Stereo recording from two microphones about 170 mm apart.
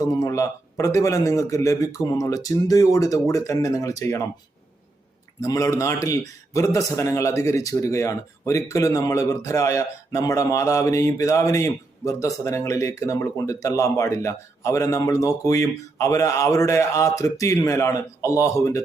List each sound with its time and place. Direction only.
0.0 s a man's voice: 20° left (ahead or behind)
5.4 s a man's voice: 20° left (ahead or behind)